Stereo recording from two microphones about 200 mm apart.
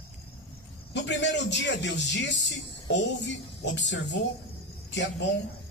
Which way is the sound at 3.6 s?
65° left (ahead or behind).